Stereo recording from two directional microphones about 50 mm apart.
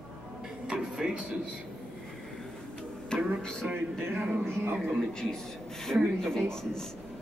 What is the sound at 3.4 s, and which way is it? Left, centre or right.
Speech, centre.